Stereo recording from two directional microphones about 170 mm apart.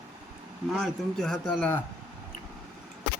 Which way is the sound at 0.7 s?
5° left (ahead or behind).